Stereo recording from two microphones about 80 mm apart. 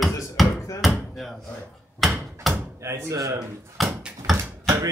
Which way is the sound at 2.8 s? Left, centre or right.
Right.